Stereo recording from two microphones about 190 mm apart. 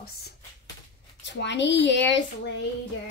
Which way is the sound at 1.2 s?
65° left (ahead or behind).